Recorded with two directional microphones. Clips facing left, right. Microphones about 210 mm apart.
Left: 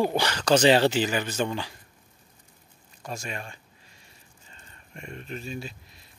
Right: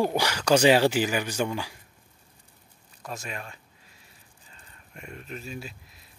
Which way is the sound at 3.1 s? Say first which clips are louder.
Left 1 dB; centre (ahead or behind).